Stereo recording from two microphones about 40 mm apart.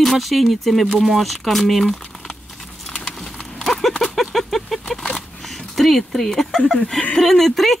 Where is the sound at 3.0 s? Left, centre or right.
Centre.